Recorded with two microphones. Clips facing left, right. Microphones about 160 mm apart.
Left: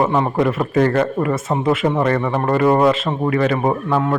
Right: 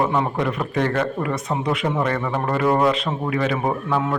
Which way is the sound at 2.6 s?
15° left (ahead or behind).